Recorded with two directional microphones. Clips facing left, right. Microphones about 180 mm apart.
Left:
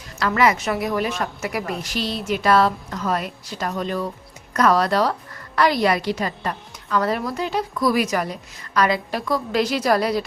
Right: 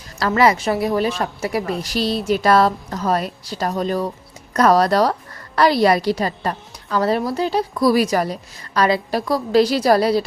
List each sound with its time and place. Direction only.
0.2 s a woman's voice: 35° right (ahead or behind)